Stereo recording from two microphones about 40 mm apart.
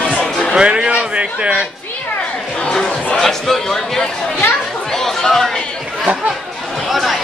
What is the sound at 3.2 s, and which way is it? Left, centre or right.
A man's voice, centre.